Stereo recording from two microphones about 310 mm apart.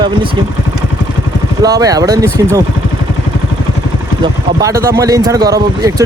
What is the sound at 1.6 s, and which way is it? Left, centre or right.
Speech, centre.